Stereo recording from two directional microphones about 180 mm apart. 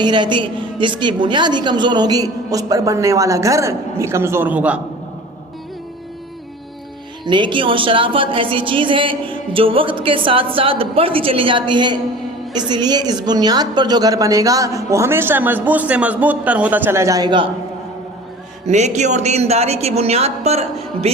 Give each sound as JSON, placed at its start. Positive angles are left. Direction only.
{"t": 0.0, "sound": "a woman's voice", "side_deg": -25}
{"t": 7.3, "sound": "a woman's voice", "side_deg": -25}
{"t": 18.7, "sound": "a woman's voice", "side_deg": -40}